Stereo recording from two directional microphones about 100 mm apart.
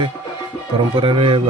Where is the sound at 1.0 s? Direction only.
60° right (ahead or behind).